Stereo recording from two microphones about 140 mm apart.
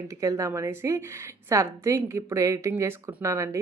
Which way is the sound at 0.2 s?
20° right (ahead or behind).